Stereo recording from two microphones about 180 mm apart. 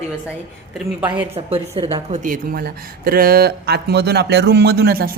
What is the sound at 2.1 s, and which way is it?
Speech, 50° right (ahead or behind).